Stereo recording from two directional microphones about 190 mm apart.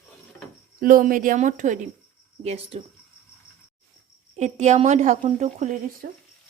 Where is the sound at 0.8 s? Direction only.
45° right (ahead or behind); by 2.8 s 30° right (ahead or behind).